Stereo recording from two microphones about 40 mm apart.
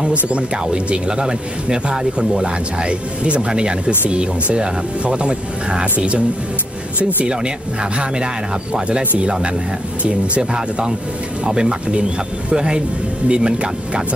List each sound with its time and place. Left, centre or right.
0.0 s speech: right
9.2 s speech: right